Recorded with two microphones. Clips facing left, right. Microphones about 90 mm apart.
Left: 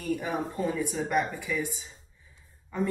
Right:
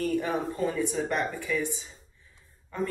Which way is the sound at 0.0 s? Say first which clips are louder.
Right 3 dB; 5° left (ahead or behind).